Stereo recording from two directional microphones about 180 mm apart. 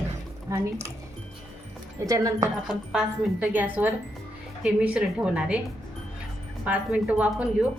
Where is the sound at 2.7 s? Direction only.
5° right (ahead or behind).